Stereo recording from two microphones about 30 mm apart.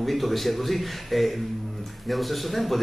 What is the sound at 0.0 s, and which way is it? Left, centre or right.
A man's voice, centre.